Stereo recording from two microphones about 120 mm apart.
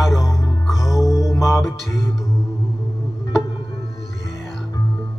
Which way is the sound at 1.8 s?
30° left (ahead or behind).